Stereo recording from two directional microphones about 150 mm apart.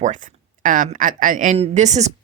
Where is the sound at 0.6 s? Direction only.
60° right (ahead or behind).